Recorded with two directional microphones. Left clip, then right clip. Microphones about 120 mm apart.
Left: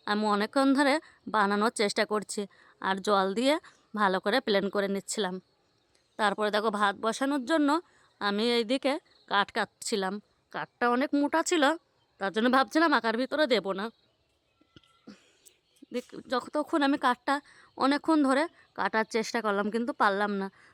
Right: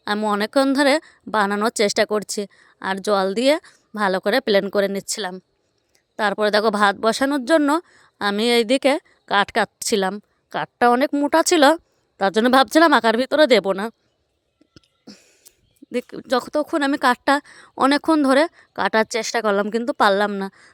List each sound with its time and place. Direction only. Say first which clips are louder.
0.3 s a woman's voice: right 7 dB; 30° right (ahead or behind); by 13.9 s 45° right (ahead or behind)
14.7 s a sound: right 7 dB; 35° right (ahead or behind)
15.9 s speech: right 10 dB; 50° right (ahead or behind)
16.5 s a woman's voice: right 7 dB; 25° right (ahead or behind)
16.9 s a woman's voice: right 9 dB; 40° right (ahead or behind)